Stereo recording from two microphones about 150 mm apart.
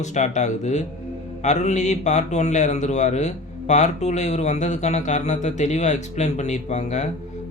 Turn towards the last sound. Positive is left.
turn(degrees=50)  # may be behind; listen again after turning